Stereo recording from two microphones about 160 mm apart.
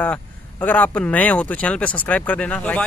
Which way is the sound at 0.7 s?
10° left (ahead or behind).